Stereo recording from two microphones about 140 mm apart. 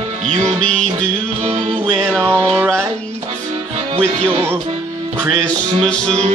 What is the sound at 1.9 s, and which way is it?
Music, 5° left (ahead or behind).